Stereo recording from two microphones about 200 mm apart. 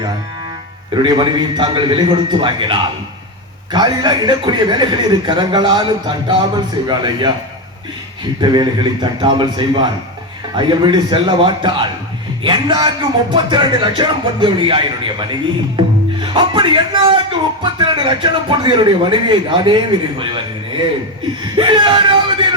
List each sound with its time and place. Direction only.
1.0 s speech: 20° right (ahead or behind)
8.4 s speech: 20° right (ahead or behind)
15.8 s music: 25° right (ahead or behind)
16.2 s speech: 25° right (ahead or behind)